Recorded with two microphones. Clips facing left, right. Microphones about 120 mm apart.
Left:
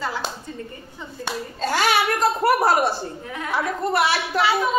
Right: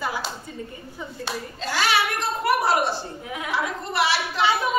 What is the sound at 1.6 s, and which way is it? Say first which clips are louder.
A child's voice: left 3 dB; 50° left (ahead or behind).